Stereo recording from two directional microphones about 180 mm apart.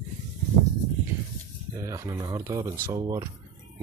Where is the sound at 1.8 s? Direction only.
15° right (ahead or behind).